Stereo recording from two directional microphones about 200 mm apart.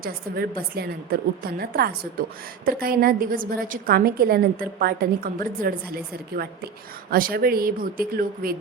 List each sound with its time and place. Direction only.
0.0 s a woman's voice: 50° right (ahead or behind)